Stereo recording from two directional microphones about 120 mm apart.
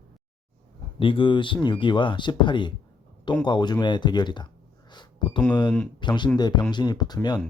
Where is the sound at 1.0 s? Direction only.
45° left (ahead or behind).